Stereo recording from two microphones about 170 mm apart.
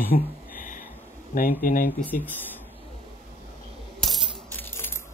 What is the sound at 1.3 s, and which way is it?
Speech, 55° left (ahead or behind).